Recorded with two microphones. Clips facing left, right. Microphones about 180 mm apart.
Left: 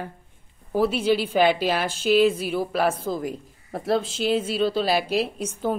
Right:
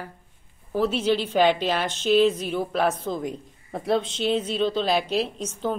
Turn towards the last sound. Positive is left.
turn(degrees=10)  # may be behind; listen again after turning